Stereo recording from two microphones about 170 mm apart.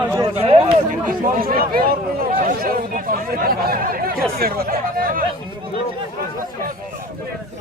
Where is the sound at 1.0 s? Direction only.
60° right (ahead or behind).